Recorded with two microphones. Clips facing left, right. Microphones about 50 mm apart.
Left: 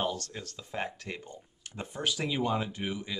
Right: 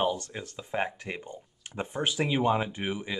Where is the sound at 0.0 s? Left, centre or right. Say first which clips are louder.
Right 4 dB; centre.